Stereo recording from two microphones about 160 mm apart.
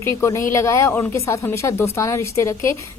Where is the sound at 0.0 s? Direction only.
15° left (ahead or behind).